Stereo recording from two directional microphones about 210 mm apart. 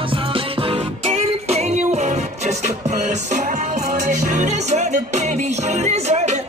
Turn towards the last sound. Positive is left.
turn(degrees=-30)  # may be behind; listen again after turning